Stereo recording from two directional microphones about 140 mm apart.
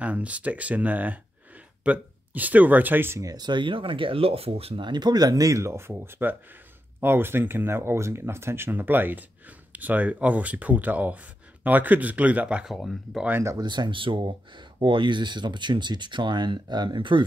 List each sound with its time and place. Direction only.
0.0 s speech: 10° right (ahead or behind)
13.3 s speech: 20° right (ahead or behind)